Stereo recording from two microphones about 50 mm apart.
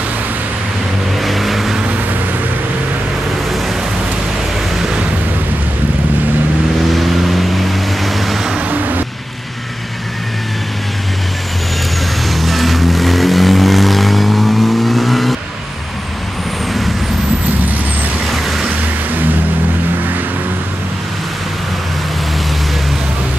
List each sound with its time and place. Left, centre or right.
1.2 s vehicle: centre
6.9 s vehicle: centre
8.6 s vehicle: right
12.3 s vehicle: centre
18.3 s vehicle: centre